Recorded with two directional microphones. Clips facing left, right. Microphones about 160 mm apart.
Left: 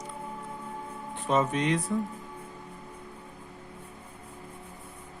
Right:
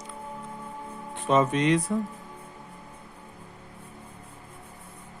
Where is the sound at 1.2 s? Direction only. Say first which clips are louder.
Right 4 dB; 90° right.